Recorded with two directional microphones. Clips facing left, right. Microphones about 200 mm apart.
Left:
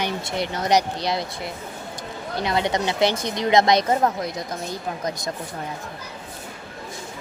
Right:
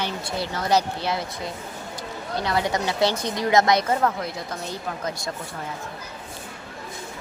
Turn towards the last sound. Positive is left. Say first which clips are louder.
# left 2 dB
turn(degrees=15)  # may be behind; listen again after turning